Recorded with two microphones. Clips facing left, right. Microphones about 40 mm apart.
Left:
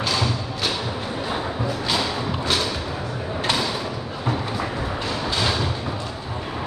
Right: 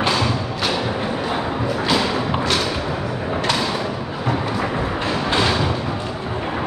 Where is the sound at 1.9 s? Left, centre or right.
Centre.